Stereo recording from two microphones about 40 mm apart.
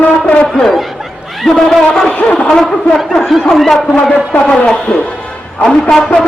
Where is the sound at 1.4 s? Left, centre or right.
Centre.